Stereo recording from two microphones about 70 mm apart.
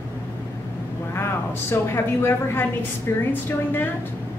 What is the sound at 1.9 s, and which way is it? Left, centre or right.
A woman's voice, left.